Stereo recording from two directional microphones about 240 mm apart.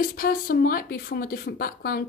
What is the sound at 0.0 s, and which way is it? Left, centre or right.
Speech, left.